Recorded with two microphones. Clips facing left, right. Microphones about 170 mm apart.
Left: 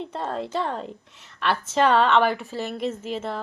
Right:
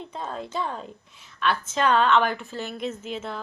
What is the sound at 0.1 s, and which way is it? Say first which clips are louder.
A woman's voice: left 2 dB; 75° left (ahead or behind).